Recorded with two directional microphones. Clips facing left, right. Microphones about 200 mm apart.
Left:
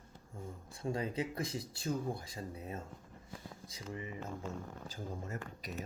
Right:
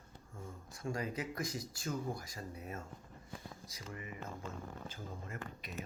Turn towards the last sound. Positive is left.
turn(degrees=40)  # may be behind; listen again after turning